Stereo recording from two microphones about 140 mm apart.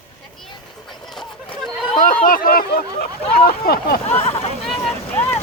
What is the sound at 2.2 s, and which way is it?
Speech, 90° left.